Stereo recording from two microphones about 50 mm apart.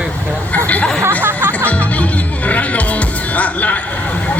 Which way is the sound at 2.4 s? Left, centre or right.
Left.